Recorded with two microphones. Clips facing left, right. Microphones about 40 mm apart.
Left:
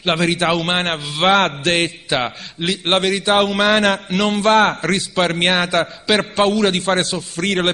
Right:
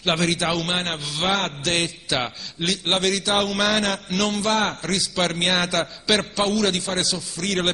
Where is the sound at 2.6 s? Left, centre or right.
Centre.